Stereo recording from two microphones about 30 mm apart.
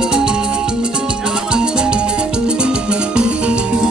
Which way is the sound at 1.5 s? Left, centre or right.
Right.